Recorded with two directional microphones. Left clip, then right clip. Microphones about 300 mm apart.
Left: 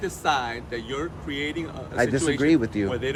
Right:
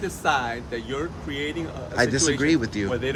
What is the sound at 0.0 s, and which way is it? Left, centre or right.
Speech, centre.